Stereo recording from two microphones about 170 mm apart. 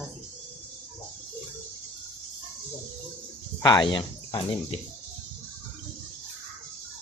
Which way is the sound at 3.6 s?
25° left (ahead or behind).